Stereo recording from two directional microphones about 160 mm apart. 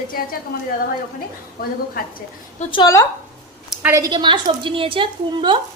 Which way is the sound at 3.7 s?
10° right (ahead or behind).